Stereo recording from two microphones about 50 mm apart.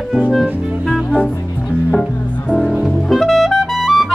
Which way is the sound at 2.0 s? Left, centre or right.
Centre.